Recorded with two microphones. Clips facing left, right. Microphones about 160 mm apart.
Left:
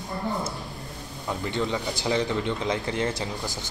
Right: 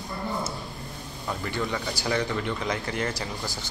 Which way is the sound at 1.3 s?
20° left (ahead or behind).